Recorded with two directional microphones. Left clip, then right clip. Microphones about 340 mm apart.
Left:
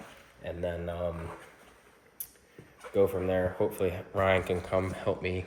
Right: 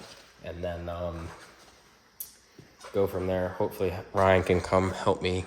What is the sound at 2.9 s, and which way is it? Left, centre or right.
Speech, centre.